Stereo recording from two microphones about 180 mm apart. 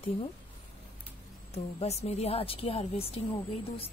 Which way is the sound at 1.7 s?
35° left (ahead or behind).